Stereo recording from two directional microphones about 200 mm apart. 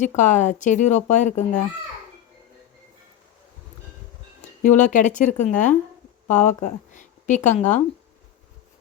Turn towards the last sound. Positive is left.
turn(degrees=40)  # may be behind; listen again after turning